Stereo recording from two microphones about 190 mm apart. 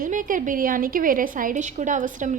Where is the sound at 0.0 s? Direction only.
45° right (ahead or behind).